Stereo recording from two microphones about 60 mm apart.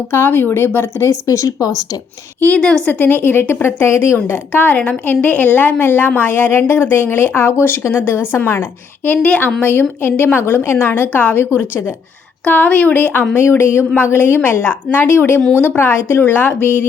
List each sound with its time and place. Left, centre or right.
0.1 s a woman's voice: left
1.0 s speech: left
2.8 s a woman's voice: left
4.5 s a woman's voice: left
9.0 s a woman's voice: left
12.5 s a woman's voice: left
13.3 s a woman's voice: left